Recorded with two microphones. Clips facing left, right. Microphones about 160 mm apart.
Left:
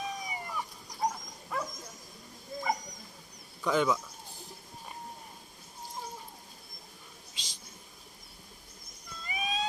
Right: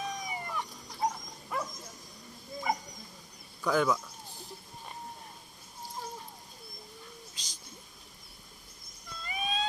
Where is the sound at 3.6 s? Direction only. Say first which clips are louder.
Even; centre (ahead or behind).